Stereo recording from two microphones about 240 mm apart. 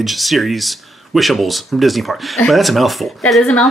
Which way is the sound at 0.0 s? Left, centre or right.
Centre.